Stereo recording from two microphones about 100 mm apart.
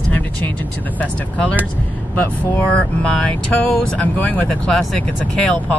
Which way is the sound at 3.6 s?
15° left (ahead or behind).